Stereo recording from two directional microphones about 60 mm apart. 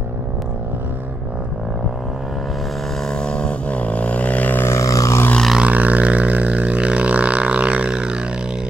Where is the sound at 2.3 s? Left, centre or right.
Centre; by 4.6 s left.